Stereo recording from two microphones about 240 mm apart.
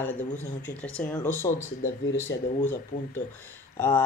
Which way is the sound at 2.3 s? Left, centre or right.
Left.